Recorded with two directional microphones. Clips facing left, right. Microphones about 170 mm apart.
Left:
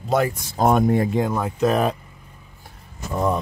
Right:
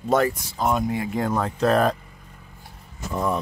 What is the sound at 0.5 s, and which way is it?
Speech, 50° left (ahead or behind).